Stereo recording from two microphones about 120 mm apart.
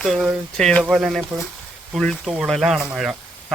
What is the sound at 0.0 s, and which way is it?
Speech, 5° right (ahead or behind).